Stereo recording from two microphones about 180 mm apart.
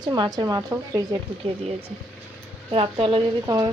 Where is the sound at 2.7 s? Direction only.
30° right (ahead or behind).